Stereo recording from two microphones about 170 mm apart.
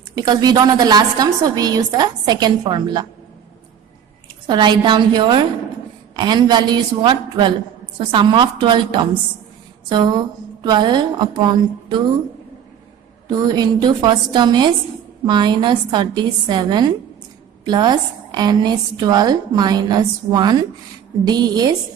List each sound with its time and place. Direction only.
0.2 s a woman's voice: 25° right (ahead or behind)
4.4 s a woman's voice: 25° right (ahead or behind)
13.2 s a woman's voice: 25° right (ahead or behind)